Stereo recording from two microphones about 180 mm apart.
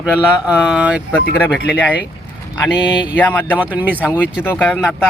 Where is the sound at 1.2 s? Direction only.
60° left (ahead or behind).